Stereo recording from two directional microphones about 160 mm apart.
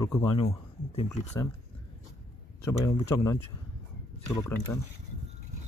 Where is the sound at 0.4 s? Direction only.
40° left (ahead or behind).